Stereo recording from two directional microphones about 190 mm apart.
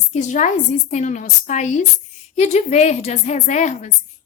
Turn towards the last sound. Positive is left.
turn(degrees=40)  # may be behind; listen again after turning